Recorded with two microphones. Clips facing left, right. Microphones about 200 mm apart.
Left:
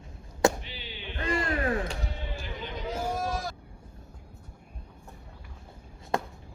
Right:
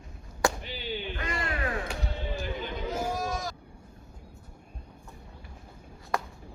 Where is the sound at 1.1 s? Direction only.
30° left (ahead or behind).